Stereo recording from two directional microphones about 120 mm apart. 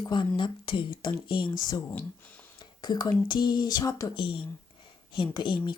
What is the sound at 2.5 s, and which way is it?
Speech, 35° left (ahead or behind).